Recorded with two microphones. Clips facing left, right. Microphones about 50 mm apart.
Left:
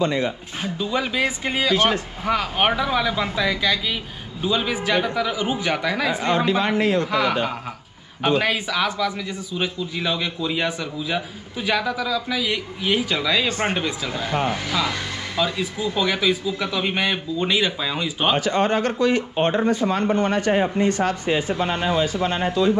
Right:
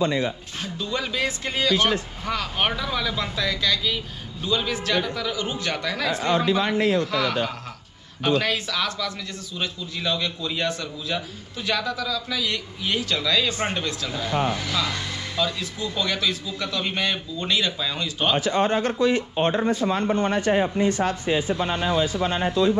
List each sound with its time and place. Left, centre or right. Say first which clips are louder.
0.0 s speech: left 1 dB; left
0.6 s a man's voice: left 5 dB; centre
6.2 s speech: even; left
7.0 s a man's voice: left 3 dB; centre
13.5 s speech: left 3 dB; left
13.7 s a man's voice: left 3 dB; centre
18.4 s speech: left 2 dB; left